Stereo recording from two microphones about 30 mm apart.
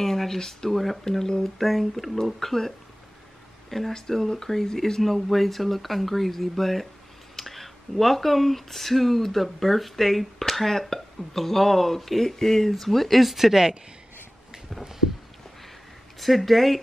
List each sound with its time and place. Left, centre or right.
0.0 s speech: centre
0.7 s speech: centre
3.7 s speech: centre
5.0 s speech: centre
16.2 s speech: centre